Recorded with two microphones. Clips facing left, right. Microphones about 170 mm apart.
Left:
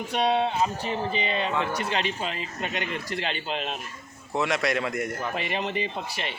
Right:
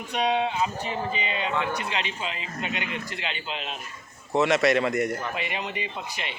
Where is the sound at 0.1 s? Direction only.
35° left (ahead or behind).